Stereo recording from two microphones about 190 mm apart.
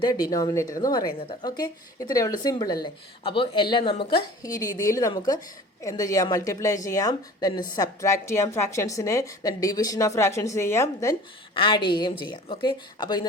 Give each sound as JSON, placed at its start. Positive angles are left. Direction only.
{"t": 0.1, "sound": "a woman's voice", "side_deg": 20}
{"t": 11.5, "sound": "a woman's voice", "side_deg": 25}